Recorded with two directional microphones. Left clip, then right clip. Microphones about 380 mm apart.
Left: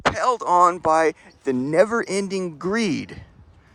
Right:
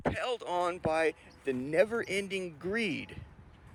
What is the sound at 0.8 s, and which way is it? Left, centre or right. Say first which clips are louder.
Speech: left 11 dB; left.